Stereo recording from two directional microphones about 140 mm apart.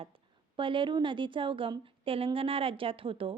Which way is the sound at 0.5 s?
35° right (ahead or behind).